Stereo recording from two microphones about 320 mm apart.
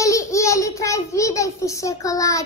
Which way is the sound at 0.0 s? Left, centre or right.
Centre.